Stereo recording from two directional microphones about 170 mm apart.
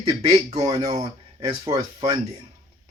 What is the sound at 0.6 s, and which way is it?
Speech, 20° right (ahead or behind).